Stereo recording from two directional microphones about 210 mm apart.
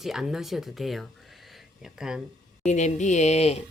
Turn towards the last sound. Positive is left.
turn(degrees=30)  # may be behind; listen again after turning